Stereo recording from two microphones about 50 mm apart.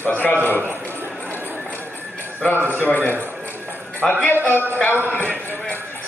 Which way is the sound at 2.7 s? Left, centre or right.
Left.